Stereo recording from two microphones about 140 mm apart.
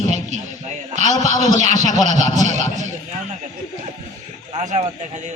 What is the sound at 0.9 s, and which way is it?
A man's voice, 55° right (ahead or behind).